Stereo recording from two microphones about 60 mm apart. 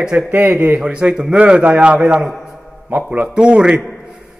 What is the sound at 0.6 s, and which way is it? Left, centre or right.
A man's voice, centre.